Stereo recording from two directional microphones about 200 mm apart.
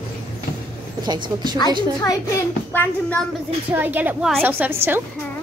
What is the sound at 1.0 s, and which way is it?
Speech, 20° right (ahead or behind).